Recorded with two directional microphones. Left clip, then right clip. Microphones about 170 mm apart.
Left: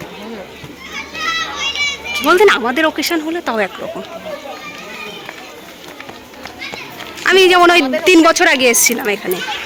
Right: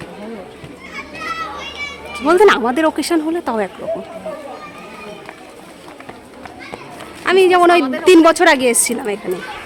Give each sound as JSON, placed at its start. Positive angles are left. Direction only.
{"t": 0.9, "sound": "children playing", "side_deg": -80}
{"t": 2.1, "sound": "speech", "side_deg": -20}
{"t": 7.3, "sound": "a woman's voice", "side_deg": -5}